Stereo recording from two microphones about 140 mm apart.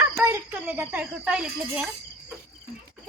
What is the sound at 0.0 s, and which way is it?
Cricket, 20° right (ahead or behind).